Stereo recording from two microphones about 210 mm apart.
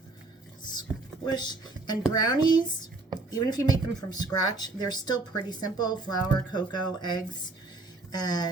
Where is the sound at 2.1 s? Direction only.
20° left (ahead or behind).